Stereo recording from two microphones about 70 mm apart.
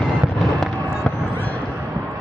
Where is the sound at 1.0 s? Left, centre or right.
Left.